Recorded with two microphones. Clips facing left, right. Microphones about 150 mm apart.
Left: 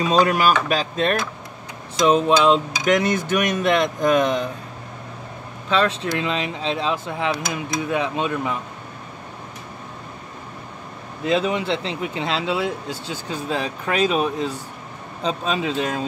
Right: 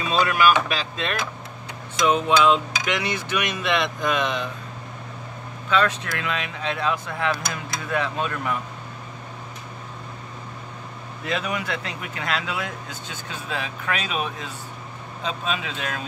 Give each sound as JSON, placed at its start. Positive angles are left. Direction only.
{"t": 0.0, "sound": "speech", "side_deg": 40}
{"t": 2.8, "sound": "speech", "side_deg": 45}
{"t": 5.7, "sound": "speech", "side_deg": 30}
{"t": 11.2, "sound": "speech", "side_deg": 25}